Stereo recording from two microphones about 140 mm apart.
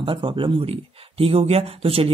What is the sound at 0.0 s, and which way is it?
Speech, 35° right (ahead or behind).